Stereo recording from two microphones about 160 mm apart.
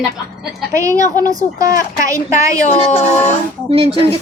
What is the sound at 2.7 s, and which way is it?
Speech, 45° left (ahead or behind).